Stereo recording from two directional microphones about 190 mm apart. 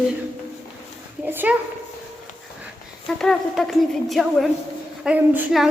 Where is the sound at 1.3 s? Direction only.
10° right (ahead or behind).